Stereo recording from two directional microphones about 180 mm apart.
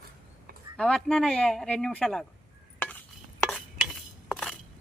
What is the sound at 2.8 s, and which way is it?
Stir, 10° left (ahead or behind).